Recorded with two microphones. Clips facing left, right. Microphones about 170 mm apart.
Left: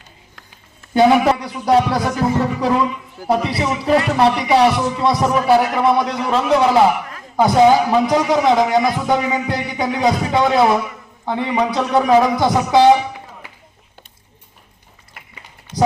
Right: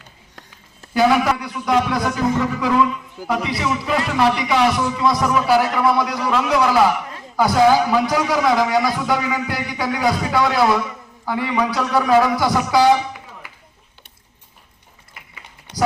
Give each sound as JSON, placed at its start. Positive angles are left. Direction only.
{"t": 0.9, "sound": "a man's voice", "side_deg": 30}